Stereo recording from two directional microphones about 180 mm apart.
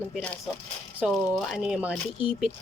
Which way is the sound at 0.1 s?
5° left (ahead or behind).